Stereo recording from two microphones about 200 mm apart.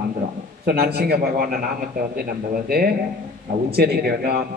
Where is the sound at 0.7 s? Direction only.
50° right (ahead or behind).